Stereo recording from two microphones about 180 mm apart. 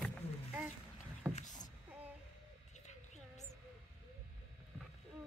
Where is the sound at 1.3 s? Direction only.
40° left (ahead or behind).